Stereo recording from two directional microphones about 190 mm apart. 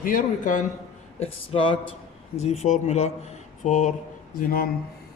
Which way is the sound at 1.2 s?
30° left (ahead or behind).